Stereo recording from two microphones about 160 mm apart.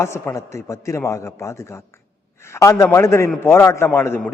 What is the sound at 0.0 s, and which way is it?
A man's voice, 15° left (ahead or behind).